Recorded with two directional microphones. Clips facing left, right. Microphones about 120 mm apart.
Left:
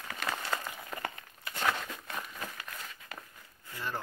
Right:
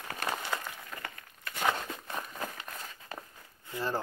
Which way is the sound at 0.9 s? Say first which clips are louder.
Left 6 dB; 15° left (ahead or behind).